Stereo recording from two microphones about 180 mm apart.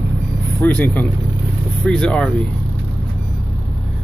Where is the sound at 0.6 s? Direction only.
10° left (ahead or behind).